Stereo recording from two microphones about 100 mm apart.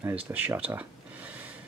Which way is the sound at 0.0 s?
15° right (ahead or behind).